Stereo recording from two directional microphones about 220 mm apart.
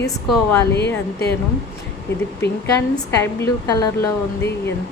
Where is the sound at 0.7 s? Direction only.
50° left (ahead or behind).